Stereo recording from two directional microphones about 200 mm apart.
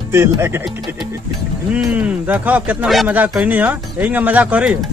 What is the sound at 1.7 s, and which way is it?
A man's voice, 5° right (ahead or behind).